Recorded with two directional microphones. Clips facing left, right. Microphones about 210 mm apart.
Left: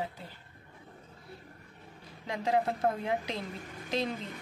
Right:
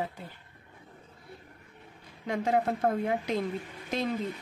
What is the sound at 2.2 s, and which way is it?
A woman's voice, 50° right (ahead or behind).